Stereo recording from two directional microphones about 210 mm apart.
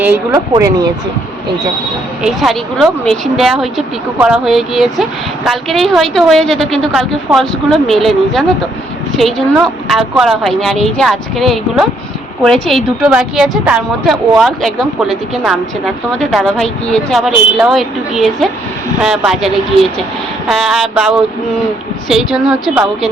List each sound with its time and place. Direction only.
0.5 s speech: 20° right (ahead or behind)
2.2 s speech: centre (ahead or behind)